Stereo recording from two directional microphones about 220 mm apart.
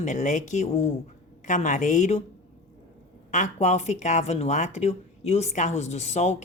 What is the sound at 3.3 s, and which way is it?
Speech, 30° left (ahead or behind).